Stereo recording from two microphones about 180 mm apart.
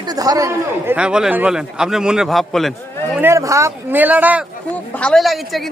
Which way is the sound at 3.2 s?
15° right (ahead or behind).